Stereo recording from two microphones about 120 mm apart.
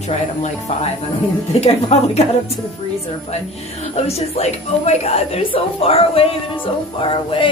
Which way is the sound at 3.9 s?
60° left (ahead or behind).